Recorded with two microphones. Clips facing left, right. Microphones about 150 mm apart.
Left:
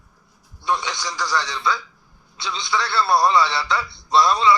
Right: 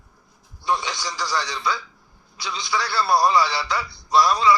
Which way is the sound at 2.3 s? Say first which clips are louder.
Left 2 dB; 25° left (ahead or behind).